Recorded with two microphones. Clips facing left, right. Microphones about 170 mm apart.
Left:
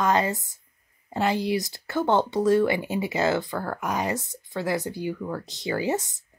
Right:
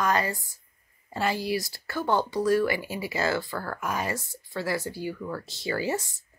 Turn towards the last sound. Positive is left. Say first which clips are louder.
# left 3 dB
turn(degrees=20)  # may be behind; listen again after turning